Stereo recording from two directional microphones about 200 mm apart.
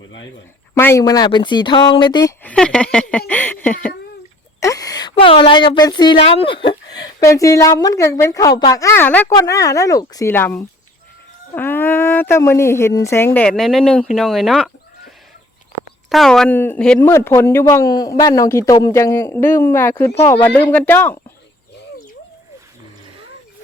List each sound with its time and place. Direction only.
0.7 s speech: 15° left (ahead or behind)
2.4 s a woman's voice: 5° left (ahead or behind)
16.0 s a woman's voice: centre (ahead or behind)